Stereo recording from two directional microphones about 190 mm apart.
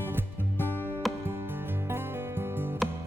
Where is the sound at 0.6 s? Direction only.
10° right (ahead or behind).